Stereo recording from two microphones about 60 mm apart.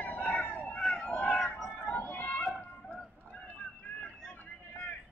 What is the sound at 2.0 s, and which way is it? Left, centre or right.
Run, left.